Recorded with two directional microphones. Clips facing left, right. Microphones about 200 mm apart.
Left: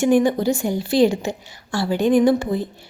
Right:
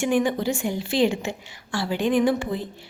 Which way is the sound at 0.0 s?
40° left (ahead or behind).